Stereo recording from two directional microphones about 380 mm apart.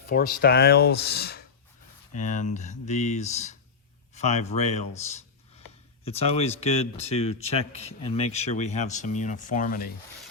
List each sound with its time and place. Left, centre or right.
0.1 s speech: left